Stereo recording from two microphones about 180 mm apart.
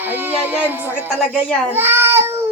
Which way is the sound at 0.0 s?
10° right (ahead or behind).